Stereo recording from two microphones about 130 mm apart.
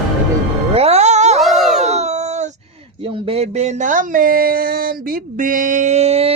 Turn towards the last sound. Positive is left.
turn(degrees=-50)  # may be behind; listen again after turning